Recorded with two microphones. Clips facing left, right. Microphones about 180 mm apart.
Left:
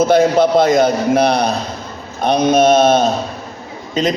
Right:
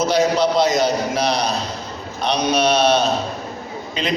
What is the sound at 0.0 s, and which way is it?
A man's voice, 55° left (ahead or behind).